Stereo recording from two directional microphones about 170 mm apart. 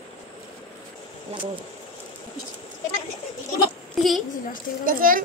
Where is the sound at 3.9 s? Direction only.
Centre (ahead or behind).